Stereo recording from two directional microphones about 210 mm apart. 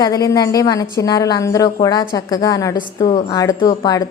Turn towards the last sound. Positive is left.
turn(degrees=20)  # may be behind; listen again after turning